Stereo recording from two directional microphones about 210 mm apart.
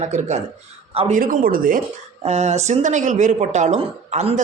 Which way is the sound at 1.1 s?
40° right (ahead or behind).